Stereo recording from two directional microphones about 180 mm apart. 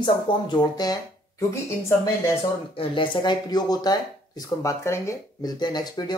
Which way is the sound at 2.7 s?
30° left (ahead or behind).